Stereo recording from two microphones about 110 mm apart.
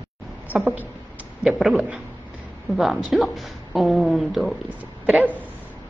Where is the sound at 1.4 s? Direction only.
5° right (ahead or behind).